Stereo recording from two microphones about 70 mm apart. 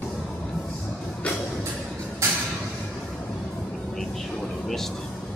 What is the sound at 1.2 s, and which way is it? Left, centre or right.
Music, centre.